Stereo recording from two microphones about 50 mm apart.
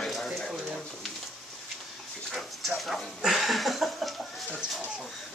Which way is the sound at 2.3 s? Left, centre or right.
Centre.